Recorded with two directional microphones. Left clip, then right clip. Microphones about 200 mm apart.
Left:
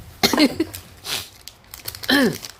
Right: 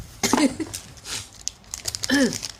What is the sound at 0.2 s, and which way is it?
Cough, 45° left (ahead or behind).